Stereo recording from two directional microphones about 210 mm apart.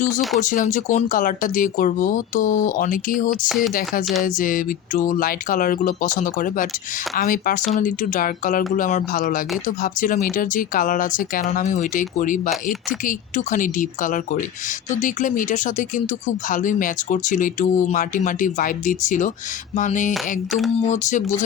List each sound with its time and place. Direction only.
0.3 s speech: 40° left (ahead or behind)